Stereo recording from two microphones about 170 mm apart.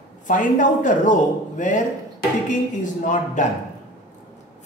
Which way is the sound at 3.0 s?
45° left (ahead or behind).